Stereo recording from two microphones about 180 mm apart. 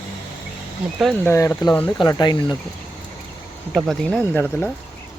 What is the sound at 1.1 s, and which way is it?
Speech, 15° left (ahead or behind).